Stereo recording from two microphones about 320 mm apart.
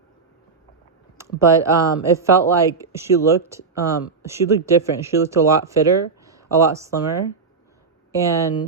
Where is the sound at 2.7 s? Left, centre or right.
Centre.